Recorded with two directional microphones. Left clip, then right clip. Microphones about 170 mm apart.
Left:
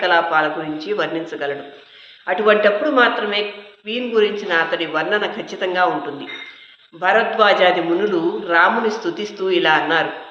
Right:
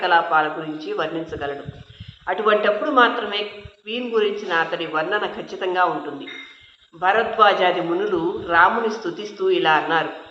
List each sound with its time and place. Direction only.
0.0 s a man's voice: 20° left (ahead or behind)
7.0 s a man's voice: 20° left (ahead or behind)